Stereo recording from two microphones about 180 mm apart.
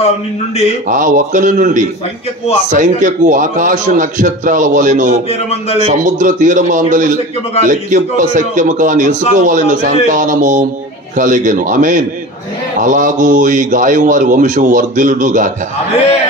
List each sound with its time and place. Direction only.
0.8 s a man's voice: 45° right (ahead or behind)
5.3 s a man's voice: 35° left (ahead or behind)
6.0 s a man's voice: 45° right (ahead or behind)